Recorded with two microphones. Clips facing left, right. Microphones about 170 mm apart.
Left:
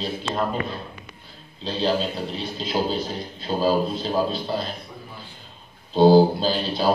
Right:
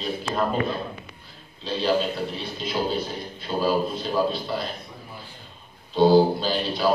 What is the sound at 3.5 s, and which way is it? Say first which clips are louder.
Speech: left 2 dB; 30° left (ahead or behind).